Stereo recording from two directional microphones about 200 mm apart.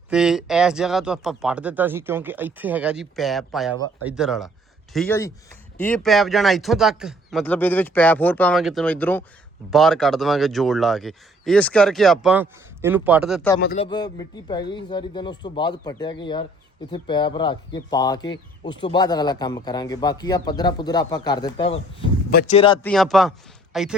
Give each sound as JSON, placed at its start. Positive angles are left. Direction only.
{"t": 0.1, "sound": "speech", "side_deg": -5}
{"t": 5.0, "sound": "speech", "side_deg": 15}
{"t": 13.7, "sound": "speech", "side_deg": 25}
{"t": 22.3, "sound": "speech", "side_deg": 50}
{"t": 22.5, "sound": "speech", "side_deg": 25}
{"t": 22.8, "sound": "speech", "side_deg": 5}